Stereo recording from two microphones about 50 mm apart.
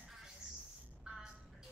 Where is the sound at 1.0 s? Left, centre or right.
Centre.